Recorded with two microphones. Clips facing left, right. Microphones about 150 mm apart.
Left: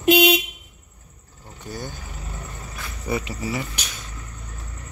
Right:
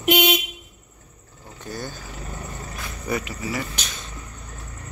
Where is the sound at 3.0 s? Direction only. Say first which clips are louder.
Left 1 dB; 25° left (ahead or behind).